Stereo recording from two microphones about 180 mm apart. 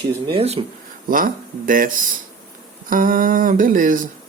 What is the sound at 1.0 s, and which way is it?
Speech, 50° right (ahead or behind).